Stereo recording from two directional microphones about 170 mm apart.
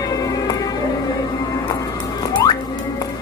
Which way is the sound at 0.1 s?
20° left (ahead or behind).